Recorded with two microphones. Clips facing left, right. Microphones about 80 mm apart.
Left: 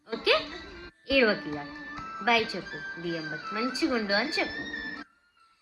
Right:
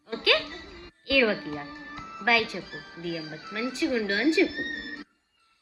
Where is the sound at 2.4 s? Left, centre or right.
Left.